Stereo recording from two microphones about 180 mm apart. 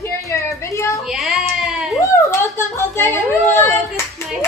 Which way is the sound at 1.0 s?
Centre (ahead or behind).